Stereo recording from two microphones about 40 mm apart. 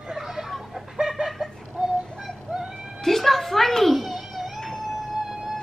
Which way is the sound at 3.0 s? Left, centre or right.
Centre.